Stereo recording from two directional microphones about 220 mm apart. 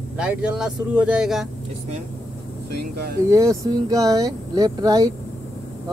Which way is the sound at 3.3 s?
15° right (ahead or behind).